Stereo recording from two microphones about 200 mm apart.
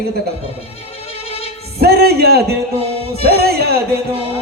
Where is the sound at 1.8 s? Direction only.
50° right (ahead or behind).